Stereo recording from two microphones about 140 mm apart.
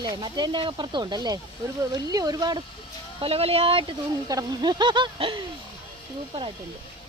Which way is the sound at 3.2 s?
45° right (ahead or behind).